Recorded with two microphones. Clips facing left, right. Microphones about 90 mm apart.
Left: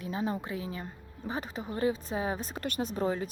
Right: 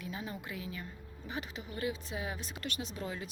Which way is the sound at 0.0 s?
35° left (ahead or behind).